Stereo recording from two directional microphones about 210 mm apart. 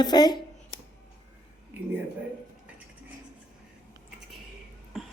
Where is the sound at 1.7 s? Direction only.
10° right (ahead or behind).